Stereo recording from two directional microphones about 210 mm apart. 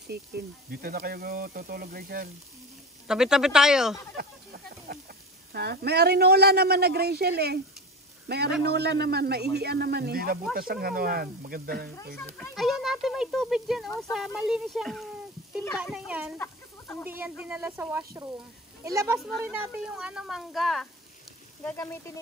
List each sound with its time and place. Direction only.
0.7 s speech: 45° right (ahead or behind)
3.1 s speech: 5° right (ahead or behind)
4.2 s speech: 45° right (ahead or behind)
12.2 s speech: 10° left (ahead or behind)
16.3 s chicken: 10° left (ahead or behind)
17.0 s speech: 10° right (ahead or behind)
19.1 s speech: centre (ahead or behind)